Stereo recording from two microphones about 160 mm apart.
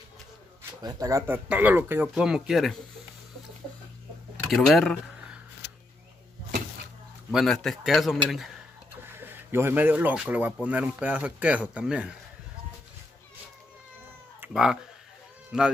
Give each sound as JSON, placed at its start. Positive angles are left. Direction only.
{"t": 0.8, "sound": "speech", "side_deg": -20}
{"t": 4.5, "sound": "speech", "side_deg": 0}
{"t": 7.2, "sound": "speech", "side_deg": 5}
{"t": 9.0, "sound": "speech", "side_deg": -15}
{"t": 14.4, "sound": "speech", "side_deg": -5}